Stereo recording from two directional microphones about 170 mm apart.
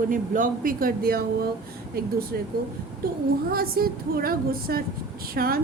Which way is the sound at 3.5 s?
60° right (ahead or behind).